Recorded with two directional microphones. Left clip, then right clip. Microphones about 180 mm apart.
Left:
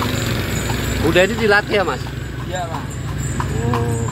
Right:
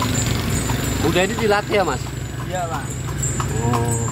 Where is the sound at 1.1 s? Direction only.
10° right (ahead or behind).